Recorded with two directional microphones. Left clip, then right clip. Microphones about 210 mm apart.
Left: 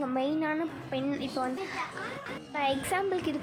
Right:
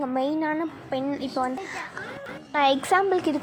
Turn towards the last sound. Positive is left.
turn(degrees=-10)  # may be behind; listen again after turning